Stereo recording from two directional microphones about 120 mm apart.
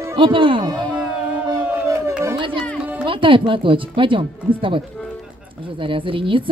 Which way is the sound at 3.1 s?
45° right (ahead or behind).